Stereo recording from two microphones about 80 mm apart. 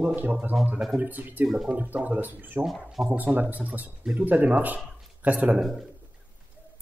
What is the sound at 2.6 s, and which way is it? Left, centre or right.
Speech, centre.